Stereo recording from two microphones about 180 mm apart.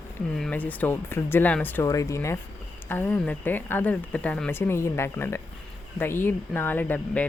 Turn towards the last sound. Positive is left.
turn(degrees=10)  # may be behind; listen again after turning